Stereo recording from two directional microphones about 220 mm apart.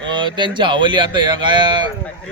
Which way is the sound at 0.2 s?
20° right (ahead or behind).